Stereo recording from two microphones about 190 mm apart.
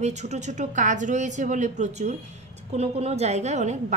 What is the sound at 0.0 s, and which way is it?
A woman's voice, 35° right (ahead or behind).